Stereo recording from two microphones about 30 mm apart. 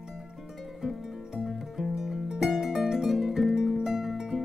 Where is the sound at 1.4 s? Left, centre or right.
Centre.